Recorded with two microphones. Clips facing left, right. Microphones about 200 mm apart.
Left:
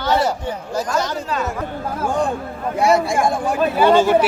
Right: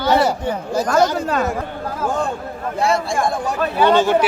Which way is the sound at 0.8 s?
55° right (ahead or behind).